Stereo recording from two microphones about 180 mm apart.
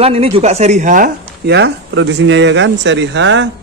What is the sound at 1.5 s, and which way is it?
A man's voice, 70° right (ahead or behind).